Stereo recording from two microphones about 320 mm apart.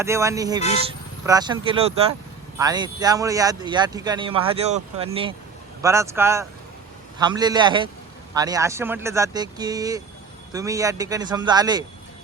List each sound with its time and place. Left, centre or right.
0.0 s speech: centre